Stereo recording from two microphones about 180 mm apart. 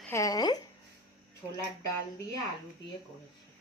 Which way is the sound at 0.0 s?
15° left (ahead or behind).